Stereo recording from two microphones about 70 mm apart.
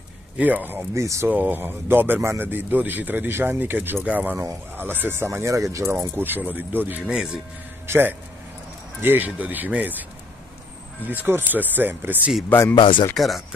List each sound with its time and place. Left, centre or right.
0.4 s speech: right
0.9 s speech: right
1.2 s speech: right
6.1 s speech: right
12.5 s speech: left
13.1 s speech: centre